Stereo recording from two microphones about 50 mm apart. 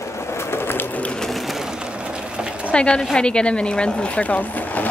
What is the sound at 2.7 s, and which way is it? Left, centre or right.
Speech, left.